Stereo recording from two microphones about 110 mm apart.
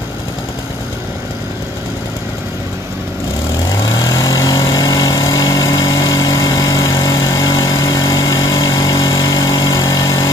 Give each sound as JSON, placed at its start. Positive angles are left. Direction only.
{"t": 4.0, "sound": "vehicle", "side_deg": 35}